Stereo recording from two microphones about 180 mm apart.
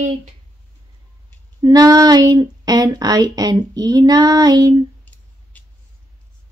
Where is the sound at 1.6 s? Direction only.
20° right (ahead or behind).